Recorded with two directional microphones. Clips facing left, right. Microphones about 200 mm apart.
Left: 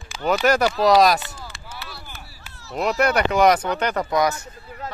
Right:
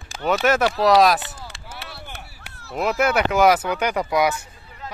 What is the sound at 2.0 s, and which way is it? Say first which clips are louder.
Chop: right 3 dB; 65° right (ahead or behind).